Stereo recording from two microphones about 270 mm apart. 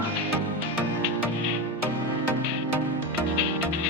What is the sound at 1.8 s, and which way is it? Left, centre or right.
Music, right.